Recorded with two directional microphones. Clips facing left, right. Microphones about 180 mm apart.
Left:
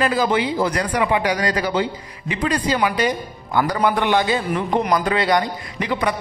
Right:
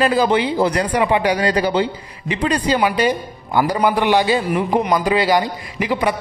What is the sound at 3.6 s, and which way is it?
A man's voice, 10° right (ahead or behind).